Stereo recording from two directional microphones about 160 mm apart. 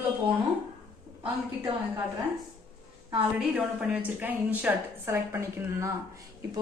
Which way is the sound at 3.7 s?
10° right (ahead or behind).